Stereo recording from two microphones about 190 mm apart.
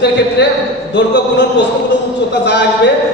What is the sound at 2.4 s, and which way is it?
Speech, 65° left (ahead or behind).